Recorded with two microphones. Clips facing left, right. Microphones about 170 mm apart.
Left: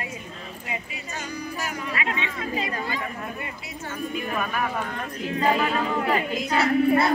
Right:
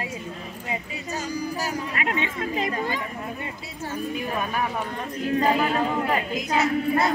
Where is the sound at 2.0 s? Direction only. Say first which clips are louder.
Right 4 dB; 45° right (ahead or behind).